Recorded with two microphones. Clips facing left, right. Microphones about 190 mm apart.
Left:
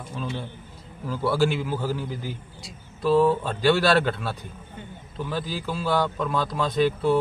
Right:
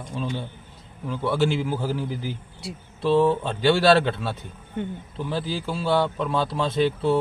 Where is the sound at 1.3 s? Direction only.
25° right (ahead or behind).